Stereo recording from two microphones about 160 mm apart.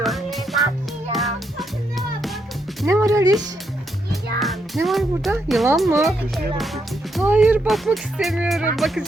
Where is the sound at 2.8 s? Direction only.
20° right (ahead or behind).